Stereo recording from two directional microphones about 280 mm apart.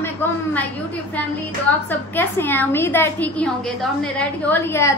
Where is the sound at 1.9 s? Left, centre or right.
Centre.